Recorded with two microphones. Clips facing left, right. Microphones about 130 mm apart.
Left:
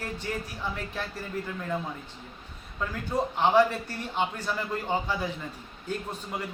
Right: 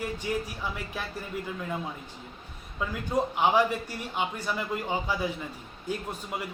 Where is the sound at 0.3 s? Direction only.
10° right (ahead or behind).